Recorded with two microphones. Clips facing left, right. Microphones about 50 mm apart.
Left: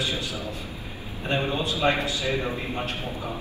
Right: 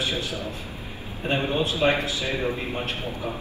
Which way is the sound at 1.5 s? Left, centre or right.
Right.